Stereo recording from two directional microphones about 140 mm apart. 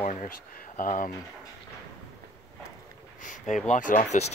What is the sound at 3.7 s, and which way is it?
Speech, 65° left (ahead or behind).